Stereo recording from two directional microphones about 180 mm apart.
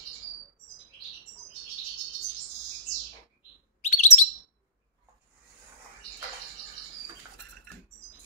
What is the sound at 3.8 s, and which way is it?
Bird, 40° left (ahead or behind).